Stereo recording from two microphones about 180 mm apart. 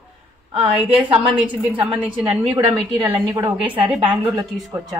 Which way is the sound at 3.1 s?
10° right (ahead or behind).